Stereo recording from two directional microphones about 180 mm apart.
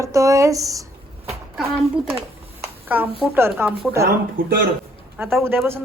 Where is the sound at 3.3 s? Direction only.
15° right (ahead or behind).